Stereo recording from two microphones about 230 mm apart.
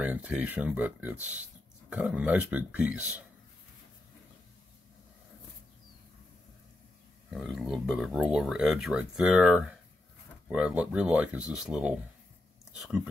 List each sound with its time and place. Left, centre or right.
0.0 s speech: centre
7.2 s speech: centre